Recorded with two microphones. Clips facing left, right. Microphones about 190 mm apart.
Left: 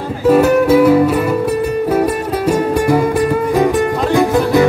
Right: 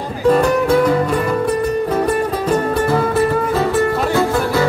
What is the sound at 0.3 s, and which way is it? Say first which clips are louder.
Music: left 4 dB; 5° left (ahead or behind).